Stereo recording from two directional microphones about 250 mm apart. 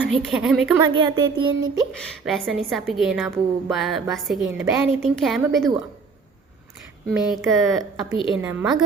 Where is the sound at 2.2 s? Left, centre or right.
Centre.